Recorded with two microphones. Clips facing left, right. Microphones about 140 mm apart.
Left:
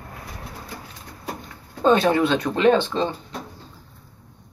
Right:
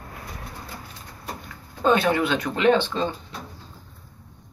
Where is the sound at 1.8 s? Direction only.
30° left (ahead or behind).